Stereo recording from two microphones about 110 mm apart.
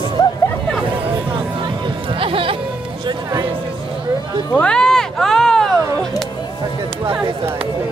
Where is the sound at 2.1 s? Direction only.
55° right (ahead or behind).